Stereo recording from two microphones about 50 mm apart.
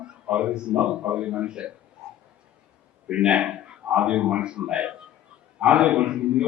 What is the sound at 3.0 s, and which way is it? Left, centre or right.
A man's voice, right.